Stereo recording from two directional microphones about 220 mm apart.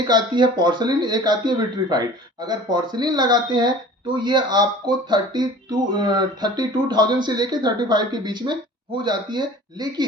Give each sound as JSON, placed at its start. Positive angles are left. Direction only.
{"t": 0.1, "sound": "speech", "side_deg": -20}